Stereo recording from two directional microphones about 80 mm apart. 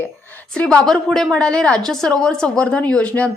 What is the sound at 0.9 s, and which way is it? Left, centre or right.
A woman's voice, centre.